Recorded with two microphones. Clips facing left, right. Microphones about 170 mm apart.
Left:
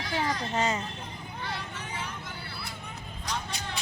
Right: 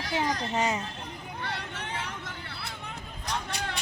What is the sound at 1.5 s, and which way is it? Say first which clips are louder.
Vehicle: right 1 dB; 65° right (ahead or behind).